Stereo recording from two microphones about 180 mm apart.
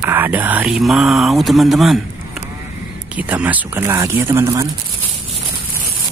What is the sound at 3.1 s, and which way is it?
Speech, 10° right (ahead or behind).